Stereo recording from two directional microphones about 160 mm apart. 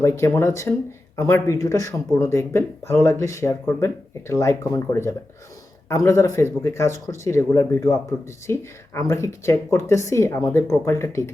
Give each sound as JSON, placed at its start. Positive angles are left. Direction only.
{"t": 0.0, "sound": "speech", "side_deg": 15}